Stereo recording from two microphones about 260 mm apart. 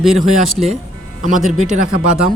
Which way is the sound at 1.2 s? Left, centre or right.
Right.